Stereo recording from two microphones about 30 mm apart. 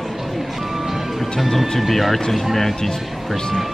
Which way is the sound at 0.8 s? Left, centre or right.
Centre.